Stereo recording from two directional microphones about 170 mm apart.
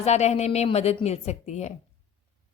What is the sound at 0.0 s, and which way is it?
A woman's voice, 40° left (ahead or behind).